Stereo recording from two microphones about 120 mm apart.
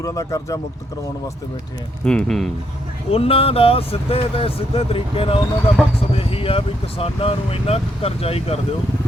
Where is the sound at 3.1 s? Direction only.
55° left (ahead or behind).